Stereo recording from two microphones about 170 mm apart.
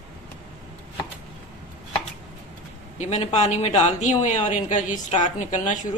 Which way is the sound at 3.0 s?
40° left (ahead or behind).